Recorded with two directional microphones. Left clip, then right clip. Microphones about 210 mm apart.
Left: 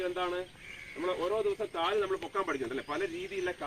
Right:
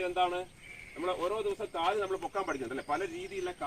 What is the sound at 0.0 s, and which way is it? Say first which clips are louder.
Speech: right 3 dB; 15° right (ahead or behind).